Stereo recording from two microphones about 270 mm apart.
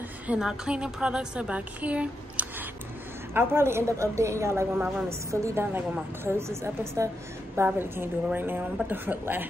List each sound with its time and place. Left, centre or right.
0.3 s a woman's voice: centre